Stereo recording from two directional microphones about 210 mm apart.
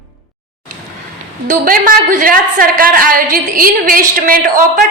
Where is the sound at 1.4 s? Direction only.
40° right (ahead or behind).